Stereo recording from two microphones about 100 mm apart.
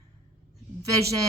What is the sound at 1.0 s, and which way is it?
Speech, 35° right (ahead or behind).